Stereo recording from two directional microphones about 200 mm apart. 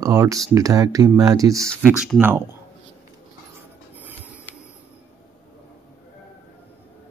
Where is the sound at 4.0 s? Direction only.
10° right (ahead or behind).